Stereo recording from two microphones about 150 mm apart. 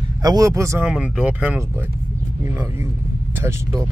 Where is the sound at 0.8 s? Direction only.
5° right (ahead or behind).